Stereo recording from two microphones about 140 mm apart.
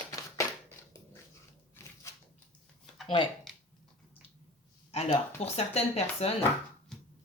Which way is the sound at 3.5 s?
Centre (ahead or behind).